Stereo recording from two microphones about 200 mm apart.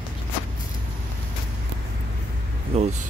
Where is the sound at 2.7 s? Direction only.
35° right (ahead or behind).